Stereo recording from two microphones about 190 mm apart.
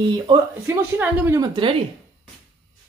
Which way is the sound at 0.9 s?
15° right (ahead or behind).